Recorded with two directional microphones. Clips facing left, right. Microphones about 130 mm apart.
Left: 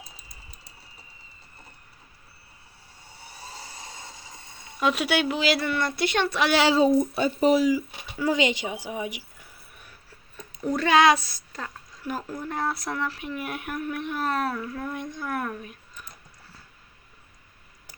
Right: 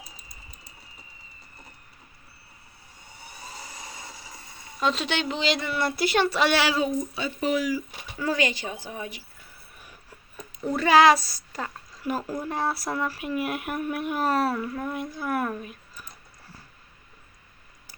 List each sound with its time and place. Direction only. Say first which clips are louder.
3.3 s a sound: even; 30° left (ahead or behind)
4.6 s speech: left 2 dB; 10° left (ahead or behind)
6.6 s speech: left 5 dB; 25° left (ahead or behind)
7.0 s speech: left 7 dB; 55° left (ahead or behind)
7.3 s speech: left 5 dB; 35° left (ahead or behind)
7.7 s speech: left 4 dB; 15° left (ahead or behind)
10.6 s speech: right 1 dB; 5° right (ahead or behind)